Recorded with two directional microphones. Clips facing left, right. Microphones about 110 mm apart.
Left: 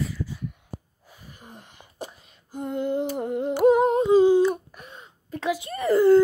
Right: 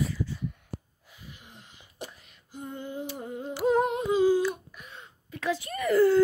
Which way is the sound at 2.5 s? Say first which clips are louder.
Left 10 dB; 70° left (ahead or behind).